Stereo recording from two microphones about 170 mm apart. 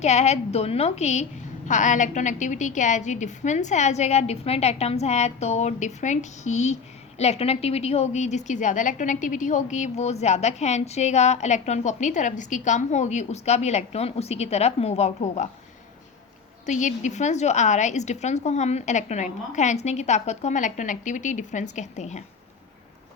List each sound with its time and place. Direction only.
0.0 s a woman's voice: 40° left (ahead or behind)
16.6 s a woman's voice: 45° left (ahead or behind)